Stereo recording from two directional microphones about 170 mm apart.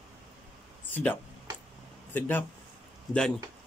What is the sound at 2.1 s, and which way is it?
Speech, 10° left (ahead or behind).